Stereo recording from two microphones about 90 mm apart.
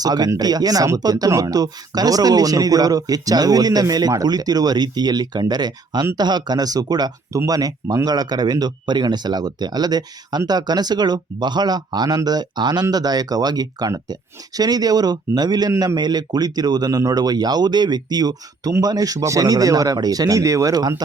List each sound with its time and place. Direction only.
0.0 s speech: 50° right (ahead or behind)